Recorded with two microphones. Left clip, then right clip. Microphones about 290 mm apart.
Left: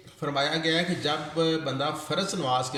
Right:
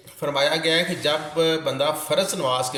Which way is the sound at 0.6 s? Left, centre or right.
Centre.